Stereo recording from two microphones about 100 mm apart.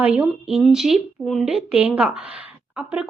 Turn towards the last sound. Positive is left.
turn(degrees=-10)  # may be behind; listen again after turning